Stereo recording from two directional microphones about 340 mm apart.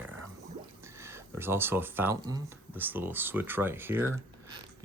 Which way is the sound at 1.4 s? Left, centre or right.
Centre.